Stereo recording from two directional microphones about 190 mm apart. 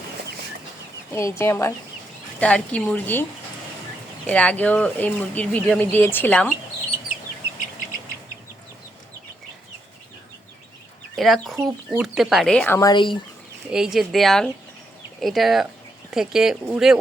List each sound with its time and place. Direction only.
1.1 s speech: 15° left (ahead or behind)
4.3 s speech: 5° left (ahead or behind)
11.2 s speech: centre (ahead or behind)
12.9 s speech: 25° left (ahead or behind)
13.7 s speech: 5° right (ahead or behind)